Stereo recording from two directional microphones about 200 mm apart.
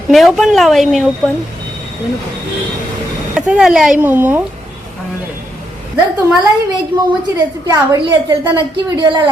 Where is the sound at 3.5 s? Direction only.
5° right (ahead or behind).